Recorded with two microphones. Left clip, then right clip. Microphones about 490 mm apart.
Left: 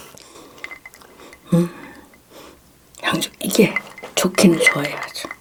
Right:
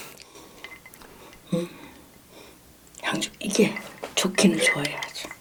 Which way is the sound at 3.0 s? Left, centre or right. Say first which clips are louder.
Left 6 dB; left.